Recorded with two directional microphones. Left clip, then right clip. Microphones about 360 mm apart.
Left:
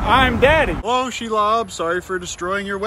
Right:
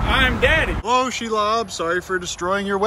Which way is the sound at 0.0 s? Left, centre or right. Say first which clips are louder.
Left 4 dB; centre.